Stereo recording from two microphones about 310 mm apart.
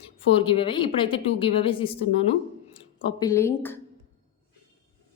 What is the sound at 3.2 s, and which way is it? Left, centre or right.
Speech, centre.